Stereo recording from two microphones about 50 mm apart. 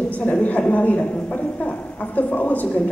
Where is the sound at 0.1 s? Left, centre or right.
Left.